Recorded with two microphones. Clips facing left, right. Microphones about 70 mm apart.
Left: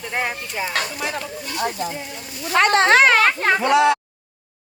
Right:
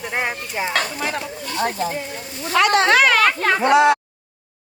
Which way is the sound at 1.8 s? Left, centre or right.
Right.